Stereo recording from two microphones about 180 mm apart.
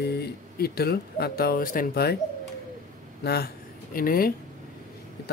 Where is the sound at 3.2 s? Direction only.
60° left (ahead or behind).